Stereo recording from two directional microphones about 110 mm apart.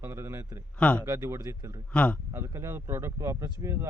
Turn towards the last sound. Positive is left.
turn(degrees=-25)  # may be behind; listen again after turning